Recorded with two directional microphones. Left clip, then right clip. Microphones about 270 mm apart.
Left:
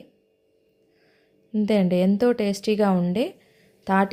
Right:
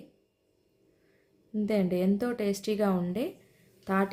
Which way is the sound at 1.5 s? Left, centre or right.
Left.